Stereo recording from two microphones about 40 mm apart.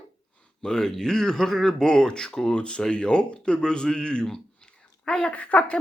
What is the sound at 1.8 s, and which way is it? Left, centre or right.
Speech, centre.